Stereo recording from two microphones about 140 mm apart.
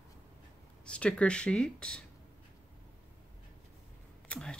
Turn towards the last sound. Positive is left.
turn(degrees=5)  # may be behind; listen again after turning